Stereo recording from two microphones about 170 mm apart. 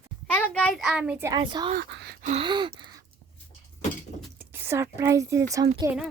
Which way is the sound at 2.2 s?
40° right (ahead or behind).